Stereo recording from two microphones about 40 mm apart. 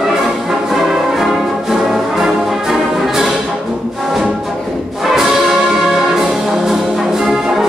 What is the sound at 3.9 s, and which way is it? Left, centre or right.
Brass instrument, centre.